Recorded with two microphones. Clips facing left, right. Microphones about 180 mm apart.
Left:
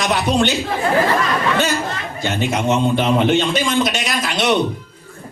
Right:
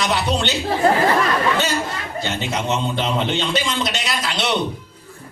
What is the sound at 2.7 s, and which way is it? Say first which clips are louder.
A man's voice: left 6 dB; 50° left (ahead or behind).